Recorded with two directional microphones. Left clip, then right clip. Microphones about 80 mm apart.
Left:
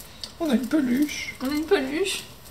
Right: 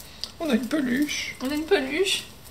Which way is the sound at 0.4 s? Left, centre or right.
Right.